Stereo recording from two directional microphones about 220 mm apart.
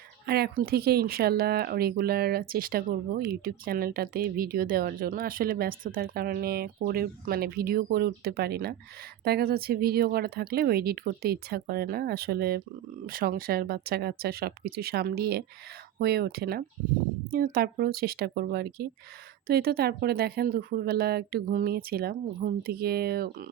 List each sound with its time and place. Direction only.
0.3 s speech: 45° right (ahead or behind)